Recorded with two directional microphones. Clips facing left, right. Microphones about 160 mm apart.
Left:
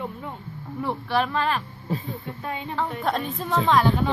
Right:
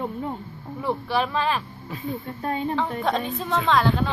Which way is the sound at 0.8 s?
Centre (ahead or behind).